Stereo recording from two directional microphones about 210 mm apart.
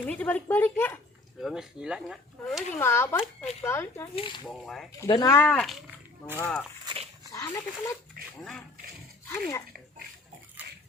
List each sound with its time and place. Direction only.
0.0 s speech: 5° left (ahead or behind)
1.4 s speech: centre (ahead or behind)
2.7 s speech: 10° left (ahead or behind)
4.1 s speech: 25° left (ahead or behind)
4.4 s speech: centre (ahead or behind)
4.9 s speech: 15° left (ahead or behind)
6.8 s dog: 25° right (ahead or behind)
7.3 s speech: 15° left (ahead or behind)
8.2 s dog: 45° right (ahead or behind)